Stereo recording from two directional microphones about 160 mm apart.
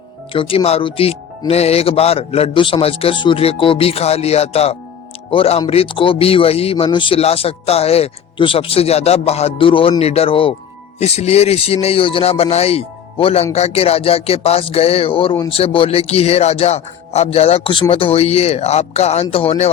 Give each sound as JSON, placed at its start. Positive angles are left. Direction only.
{"t": 0.3, "sound": "speech", "side_deg": 35}